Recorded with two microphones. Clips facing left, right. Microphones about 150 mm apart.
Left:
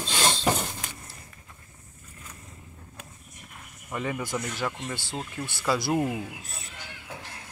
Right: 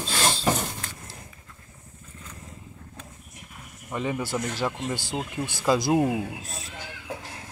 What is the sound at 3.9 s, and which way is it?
Speech, 15° right (ahead or behind).